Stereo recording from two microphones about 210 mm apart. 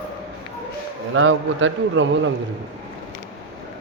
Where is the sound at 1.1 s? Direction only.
70° right (ahead or behind).